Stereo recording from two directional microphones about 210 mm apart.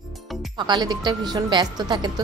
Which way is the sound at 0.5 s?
20° right (ahead or behind).